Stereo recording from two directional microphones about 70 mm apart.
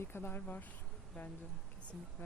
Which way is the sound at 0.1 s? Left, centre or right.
Left.